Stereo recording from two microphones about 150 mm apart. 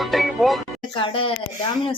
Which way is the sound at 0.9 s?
35° left (ahead or behind).